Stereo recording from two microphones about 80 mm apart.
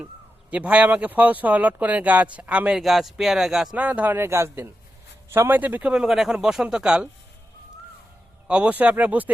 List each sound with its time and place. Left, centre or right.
0.5 s speech: centre
2.7 s speech: centre
3.8 s a man's voice: centre
5.5 s a man's voice: right
5.9 s speech: centre
8.4 s a man's voice: centre